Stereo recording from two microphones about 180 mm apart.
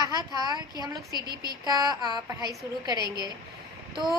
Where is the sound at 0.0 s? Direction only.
20° right (ahead or behind).